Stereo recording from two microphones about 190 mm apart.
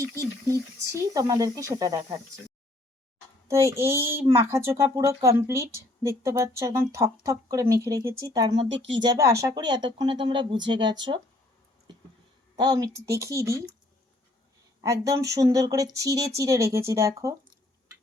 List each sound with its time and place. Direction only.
0.0 s speech: 15° right (ahead or behind)
3.5 s speech: 15° right (ahead or behind)
12.5 s speech: 20° right (ahead or behind)
15.0 s speech: 15° right (ahead or behind)